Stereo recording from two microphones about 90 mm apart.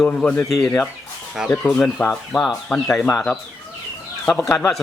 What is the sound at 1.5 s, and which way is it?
Speech, 20° left (ahead or behind).